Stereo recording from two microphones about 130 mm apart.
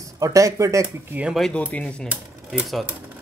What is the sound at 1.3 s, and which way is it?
Speech, 5° left (ahead or behind).